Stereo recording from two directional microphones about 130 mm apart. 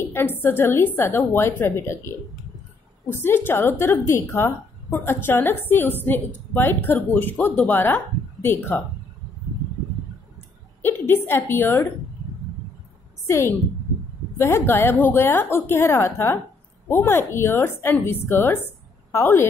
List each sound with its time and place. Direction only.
0.1 s a woman's voice: 20° left (ahead or behind)
10.8 s a woman's voice: 15° left (ahead or behind)
14.4 s a woman's voice: 20° left (ahead or behind)